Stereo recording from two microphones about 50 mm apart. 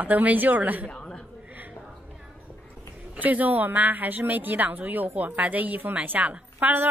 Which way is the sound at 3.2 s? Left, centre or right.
Right.